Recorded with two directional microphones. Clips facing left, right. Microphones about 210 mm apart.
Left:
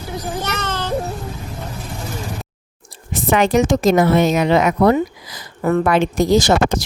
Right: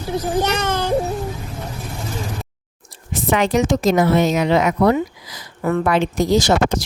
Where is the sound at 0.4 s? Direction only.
15° right (ahead or behind).